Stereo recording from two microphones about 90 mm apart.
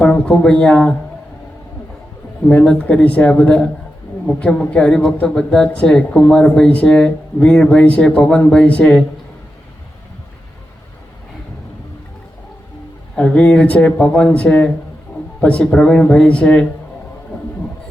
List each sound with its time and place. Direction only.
0.0 s speech: 10° left (ahead or behind)
2.5 s speech: 15° left (ahead or behind)
13.1 s speech: 10° left (ahead or behind)